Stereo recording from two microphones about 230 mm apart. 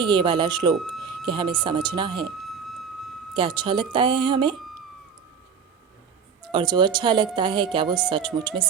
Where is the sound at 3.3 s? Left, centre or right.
Right.